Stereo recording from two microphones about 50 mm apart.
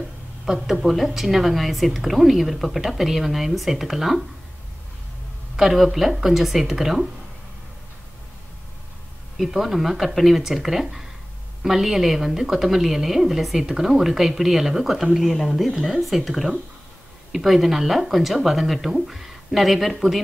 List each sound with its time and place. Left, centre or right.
0.5 s a woman's voice: centre
5.6 s a woman's voice: centre
9.4 s a woman's voice: centre